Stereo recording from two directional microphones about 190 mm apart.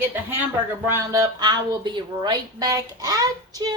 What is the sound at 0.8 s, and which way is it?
A woman's voice, 15° right (ahead or behind).